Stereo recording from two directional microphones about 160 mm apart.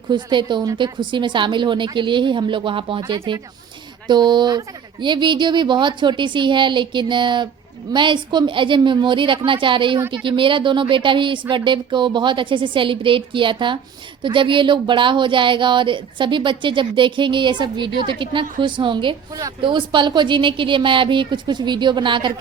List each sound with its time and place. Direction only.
0.1 s speech: 30° right (ahead or behind)